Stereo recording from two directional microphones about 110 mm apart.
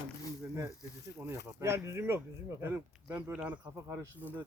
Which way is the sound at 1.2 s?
20° right (ahead or behind).